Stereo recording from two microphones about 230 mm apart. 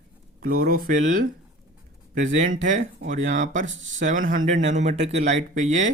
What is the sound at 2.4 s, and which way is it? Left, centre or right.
Speech, right.